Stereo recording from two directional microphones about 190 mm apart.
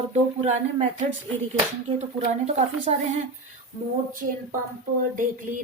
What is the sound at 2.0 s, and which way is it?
A woman's voice, 35° right (ahead or behind).